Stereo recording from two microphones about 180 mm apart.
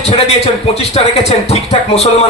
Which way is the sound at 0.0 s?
35° left (ahead or behind).